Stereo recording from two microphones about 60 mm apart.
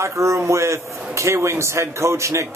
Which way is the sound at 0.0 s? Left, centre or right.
Right.